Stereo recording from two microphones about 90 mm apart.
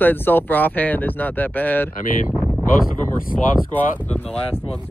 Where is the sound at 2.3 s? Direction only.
15° right (ahead or behind).